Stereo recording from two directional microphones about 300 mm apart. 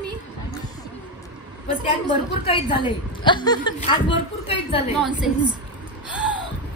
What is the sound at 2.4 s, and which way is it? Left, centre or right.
A woman's voice, centre.